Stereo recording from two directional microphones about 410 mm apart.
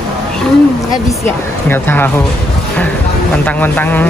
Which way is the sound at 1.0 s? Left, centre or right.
Centre.